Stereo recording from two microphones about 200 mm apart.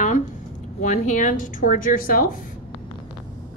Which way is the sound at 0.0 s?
40° left (ahead or behind).